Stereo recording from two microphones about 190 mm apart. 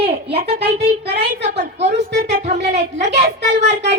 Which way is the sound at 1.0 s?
35° right (ahead or behind).